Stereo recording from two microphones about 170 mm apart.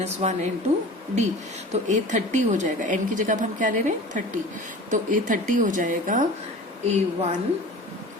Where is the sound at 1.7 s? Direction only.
45° right (ahead or behind).